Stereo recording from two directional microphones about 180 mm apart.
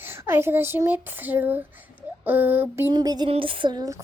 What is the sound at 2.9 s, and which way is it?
Speech, 20° right (ahead or behind).